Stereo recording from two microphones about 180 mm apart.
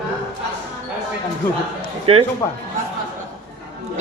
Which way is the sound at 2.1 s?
30° right (ahead or behind).